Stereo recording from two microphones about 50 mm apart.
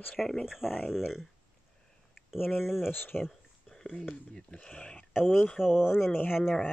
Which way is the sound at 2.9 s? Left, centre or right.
Left.